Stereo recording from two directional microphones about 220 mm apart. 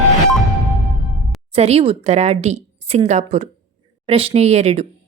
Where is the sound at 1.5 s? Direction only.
25° right (ahead or behind).